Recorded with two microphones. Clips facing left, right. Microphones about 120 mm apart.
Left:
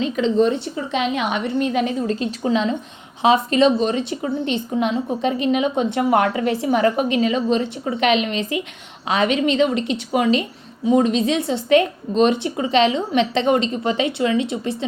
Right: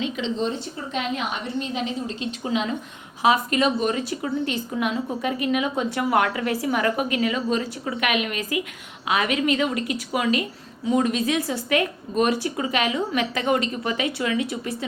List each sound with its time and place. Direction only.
0.0 s speech: 45° left (ahead or behind)
0.4 s a woman's voice: 75° left (ahead or behind); by 2.1 s 60° left (ahead or behind)
2.1 s a woman's voice: 40° left (ahead or behind)